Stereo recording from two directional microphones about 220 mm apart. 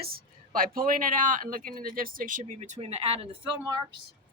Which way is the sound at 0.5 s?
40° right (ahead or behind).